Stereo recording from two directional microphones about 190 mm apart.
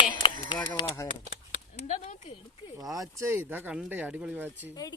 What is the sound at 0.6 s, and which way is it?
Speech, 20° left (ahead or behind).